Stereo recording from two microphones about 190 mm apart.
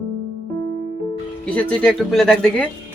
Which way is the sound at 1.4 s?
5° left (ahead or behind).